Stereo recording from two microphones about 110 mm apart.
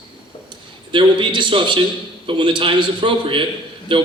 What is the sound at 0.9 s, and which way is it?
A man's voice, 45° right (ahead or behind).